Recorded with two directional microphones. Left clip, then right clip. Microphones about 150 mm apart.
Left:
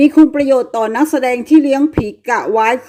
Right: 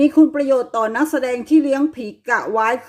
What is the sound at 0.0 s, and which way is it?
A woman's voice, 20° left (ahead or behind).